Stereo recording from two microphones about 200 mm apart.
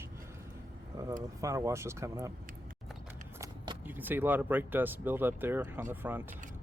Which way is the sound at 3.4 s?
10° right (ahead or behind).